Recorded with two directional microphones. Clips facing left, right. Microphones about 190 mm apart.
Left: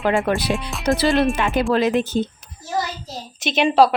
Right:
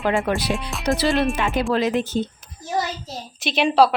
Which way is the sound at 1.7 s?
60° left (ahead or behind).